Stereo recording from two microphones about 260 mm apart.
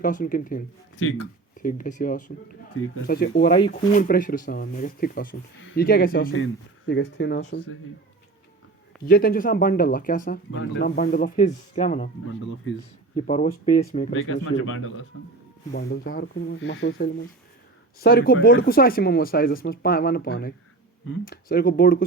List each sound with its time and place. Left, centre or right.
0.0 s speech: left
3.5 s speech: left
9.0 s speech: left
10.5 s speech: left
13.1 s speech: left
14.1 s speech: left
15.7 s speech: left